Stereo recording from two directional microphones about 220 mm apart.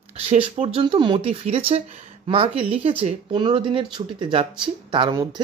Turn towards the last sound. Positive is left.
turn(degrees=-20)  # may be behind; listen again after turning